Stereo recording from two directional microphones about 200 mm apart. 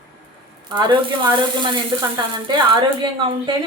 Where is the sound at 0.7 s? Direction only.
20° right (ahead or behind).